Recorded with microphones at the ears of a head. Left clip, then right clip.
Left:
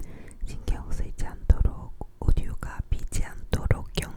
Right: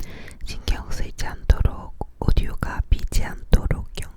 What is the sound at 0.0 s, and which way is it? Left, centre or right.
Whispering, right.